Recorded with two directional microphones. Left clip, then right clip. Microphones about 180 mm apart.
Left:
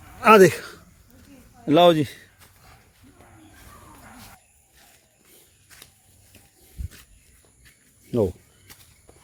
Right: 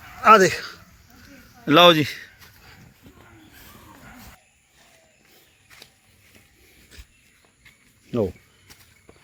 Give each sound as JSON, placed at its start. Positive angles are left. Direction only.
{"t": 0.2, "sound": "a sound", "side_deg": 75}
{"t": 1.6, "sound": "a man's voice", "side_deg": 10}
{"t": 8.1, "sound": "speech", "side_deg": 20}